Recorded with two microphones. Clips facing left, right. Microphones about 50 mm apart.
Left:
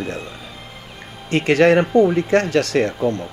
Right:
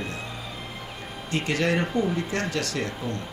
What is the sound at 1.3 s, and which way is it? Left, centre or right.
Speech, left.